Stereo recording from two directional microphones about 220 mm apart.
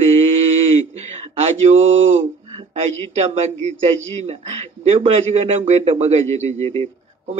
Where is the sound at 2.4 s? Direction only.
25° right (ahead or behind).